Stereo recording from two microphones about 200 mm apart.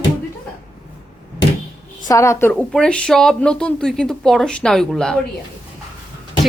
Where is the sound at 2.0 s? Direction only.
15° left (ahead or behind).